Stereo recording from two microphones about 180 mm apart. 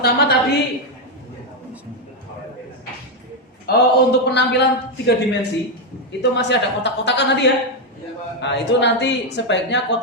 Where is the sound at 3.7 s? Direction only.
65° left (ahead or behind).